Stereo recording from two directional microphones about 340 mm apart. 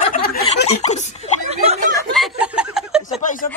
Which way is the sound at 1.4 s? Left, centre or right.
Centre.